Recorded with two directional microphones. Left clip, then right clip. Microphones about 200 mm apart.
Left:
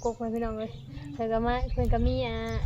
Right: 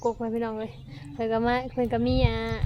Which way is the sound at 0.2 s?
50° right (ahead or behind).